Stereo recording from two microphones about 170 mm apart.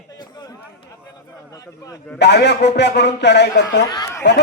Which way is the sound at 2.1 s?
85° left.